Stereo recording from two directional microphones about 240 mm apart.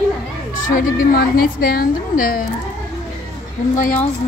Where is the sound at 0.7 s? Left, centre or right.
Left.